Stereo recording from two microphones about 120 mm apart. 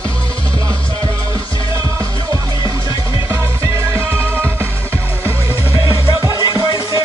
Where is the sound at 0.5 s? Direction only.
30° right (ahead or behind).